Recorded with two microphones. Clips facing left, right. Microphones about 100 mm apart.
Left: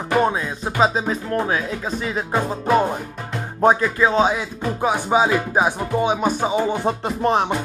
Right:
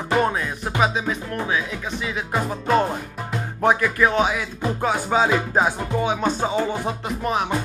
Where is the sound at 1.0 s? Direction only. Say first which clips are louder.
Left 4 dB; 30° left (ahead or behind).